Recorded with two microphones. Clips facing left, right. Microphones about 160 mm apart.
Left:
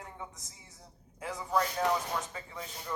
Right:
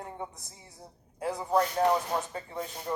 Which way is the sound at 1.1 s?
35° right (ahead or behind).